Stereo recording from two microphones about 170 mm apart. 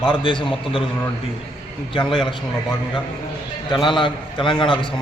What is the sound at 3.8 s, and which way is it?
A man's voice, 30° left (ahead or behind).